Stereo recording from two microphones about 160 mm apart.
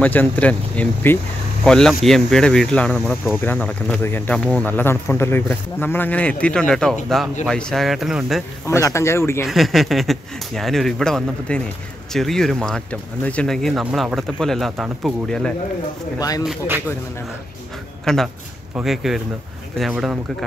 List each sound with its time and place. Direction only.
0.0 s speech: 10° left (ahead or behind)
8.6 s speech: 15° left (ahead or behind)
9.5 s speech: centre (ahead or behind)
16.2 s speech: 20° left (ahead or behind)
18.0 s speech: 5° left (ahead or behind)